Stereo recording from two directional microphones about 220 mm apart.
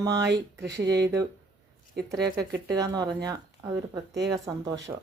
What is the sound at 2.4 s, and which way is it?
Speech, 15° right (ahead or behind).